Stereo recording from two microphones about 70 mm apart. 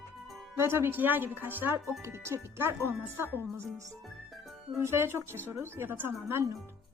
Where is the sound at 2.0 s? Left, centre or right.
Right.